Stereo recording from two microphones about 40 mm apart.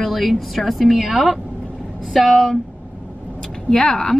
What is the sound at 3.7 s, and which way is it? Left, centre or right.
Speech, centre.